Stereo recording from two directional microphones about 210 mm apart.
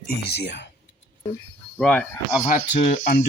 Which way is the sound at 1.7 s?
5° left (ahead or behind).